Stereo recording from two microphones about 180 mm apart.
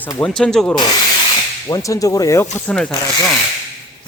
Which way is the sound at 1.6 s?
20° left (ahead or behind).